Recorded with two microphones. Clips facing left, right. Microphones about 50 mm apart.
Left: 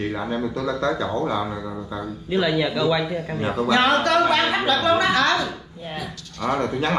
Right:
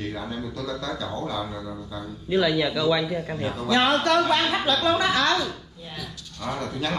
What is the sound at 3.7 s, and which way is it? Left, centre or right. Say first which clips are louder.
Speech: left 2 dB; left.